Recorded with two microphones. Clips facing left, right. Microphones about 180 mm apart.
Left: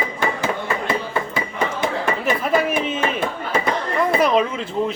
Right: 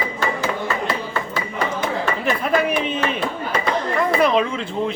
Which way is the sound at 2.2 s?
Centre (ahead or behind).